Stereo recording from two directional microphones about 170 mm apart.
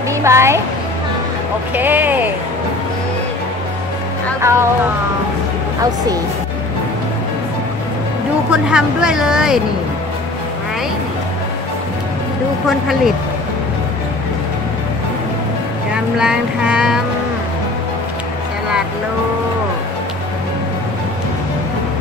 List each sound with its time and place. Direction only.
0.1 s a woman's voice: 15° right (ahead or behind)
1.8 s speech: 10° right (ahead or behind)
4.4 s speech: 15° right (ahead or behind)
8.5 s speech: 5° right (ahead or behind)
12.6 s speech: centre (ahead or behind)
15.9 s speech: 5° right (ahead or behind)